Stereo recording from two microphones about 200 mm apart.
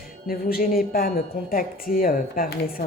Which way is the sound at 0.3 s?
45° left (ahead or behind).